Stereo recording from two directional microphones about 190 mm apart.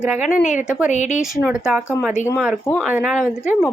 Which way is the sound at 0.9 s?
40° left (ahead or behind).